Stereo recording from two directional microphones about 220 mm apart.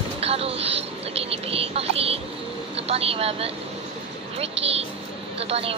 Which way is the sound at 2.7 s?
25° right (ahead or behind).